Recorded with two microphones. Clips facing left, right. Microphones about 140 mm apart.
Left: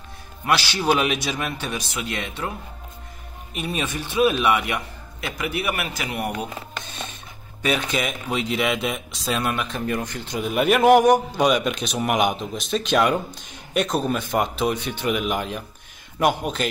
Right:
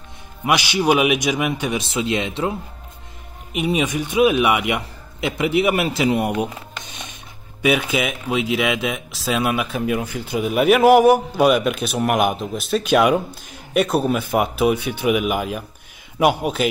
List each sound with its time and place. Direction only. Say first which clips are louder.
0.5 s a man's voice: right 3 dB; 15° right (ahead or behind)
3.5 s a man's voice: right 7 dB; 15° right (ahead or behind)
7.6 s a man's voice: right 4 dB; 5° right (ahead or behind)